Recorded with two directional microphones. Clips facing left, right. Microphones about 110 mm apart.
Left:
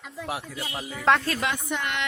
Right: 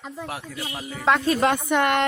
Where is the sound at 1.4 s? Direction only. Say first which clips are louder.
Right 9 dB; 55° right (ahead or behind).